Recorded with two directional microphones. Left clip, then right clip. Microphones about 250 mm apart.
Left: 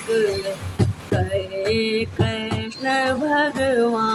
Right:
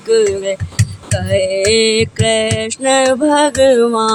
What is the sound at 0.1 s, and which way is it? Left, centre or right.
Music, right.